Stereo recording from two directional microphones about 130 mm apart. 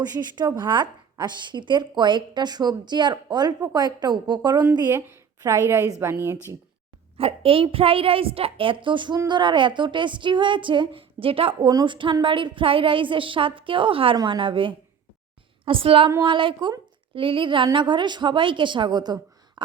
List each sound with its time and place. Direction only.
0.0 s a woman's voice: 30° right (ahead or behind)
4.9 s a woman's voice: 20° right (ahead or behind)
7.2 s a woman's voice: 45° right (ahead or behind)
11.7 s a woman's voice: 35° right (ahead or behind)